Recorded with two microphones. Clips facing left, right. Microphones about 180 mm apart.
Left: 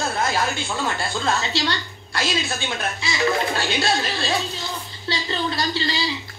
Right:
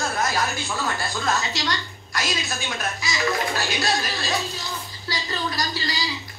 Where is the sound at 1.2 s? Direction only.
30° left (ahead or behind).